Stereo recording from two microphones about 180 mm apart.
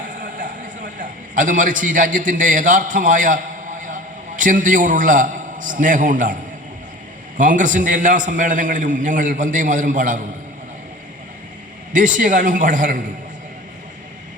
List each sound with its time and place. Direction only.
0.1 s a sound: 45° right (ahead or behind)
7.3 s a man's voice: 45° right (ahead or behind)
11.9 s a man's voice: 45° right (ahead or behind)